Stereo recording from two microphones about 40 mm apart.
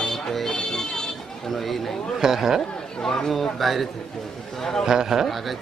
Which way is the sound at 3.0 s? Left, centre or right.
Centre.